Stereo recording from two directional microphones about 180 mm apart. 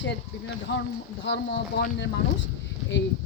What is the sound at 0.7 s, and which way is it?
Speech, 70° left (ahead or behind).